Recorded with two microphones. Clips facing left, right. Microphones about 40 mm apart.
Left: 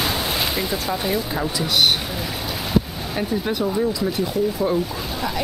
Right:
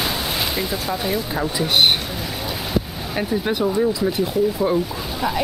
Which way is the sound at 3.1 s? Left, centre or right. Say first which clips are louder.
Right 2 dB; centre.